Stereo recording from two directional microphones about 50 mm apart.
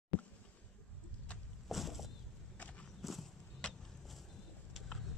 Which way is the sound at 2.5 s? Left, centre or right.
Left.